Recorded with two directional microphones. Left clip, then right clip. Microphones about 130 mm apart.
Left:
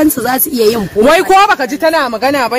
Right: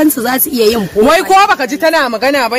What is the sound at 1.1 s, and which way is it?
Speech, 70° left (ahead or behind).